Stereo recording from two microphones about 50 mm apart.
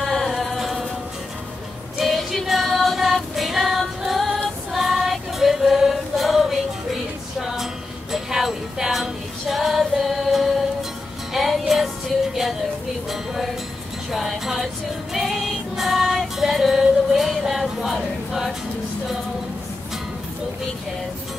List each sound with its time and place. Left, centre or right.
0.0 s music: centre
2.0 s female singing: centre
4.7 s music: centre
8.1 s music: centre
13.1 s music: centre
17.9 s choir: centre